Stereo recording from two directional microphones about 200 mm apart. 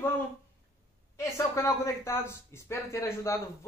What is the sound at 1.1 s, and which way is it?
Speech, 15° left (ahead or behind).